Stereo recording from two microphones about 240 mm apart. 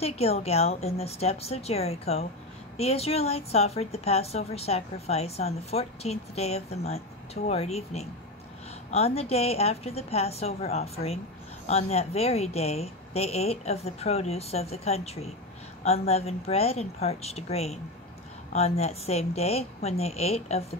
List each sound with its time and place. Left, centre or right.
0.0 s a woman's voice: left